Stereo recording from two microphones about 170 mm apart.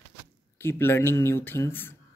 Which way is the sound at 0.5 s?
15° left (ahead or behind).